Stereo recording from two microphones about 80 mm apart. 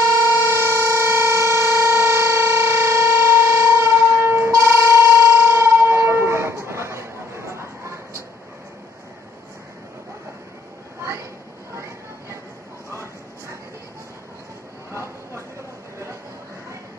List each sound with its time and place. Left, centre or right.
0.3 s civil defense siren: right
12.9 s bow-wow: right
14.9 s a sound: right